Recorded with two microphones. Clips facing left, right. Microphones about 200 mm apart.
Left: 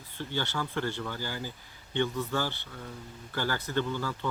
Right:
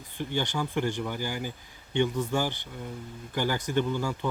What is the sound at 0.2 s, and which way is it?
Speech, 15° right (ahead or behind).